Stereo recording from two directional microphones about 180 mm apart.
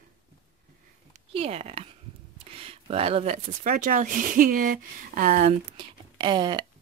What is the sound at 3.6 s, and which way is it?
Speech, 50° right (ahead or behind).